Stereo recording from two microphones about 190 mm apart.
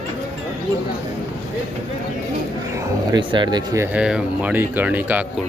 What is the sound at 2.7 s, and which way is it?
Speech, 15° right (ahead or behind).